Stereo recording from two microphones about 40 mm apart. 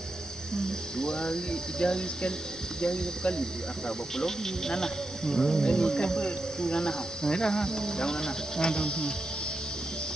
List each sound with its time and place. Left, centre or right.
0.9 s speech: centre